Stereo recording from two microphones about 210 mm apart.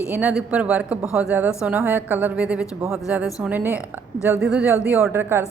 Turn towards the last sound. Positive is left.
turn(degrees=-10)  # may be behind; listen again after turning